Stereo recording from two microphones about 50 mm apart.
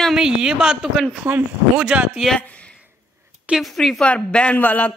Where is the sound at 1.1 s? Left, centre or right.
Right.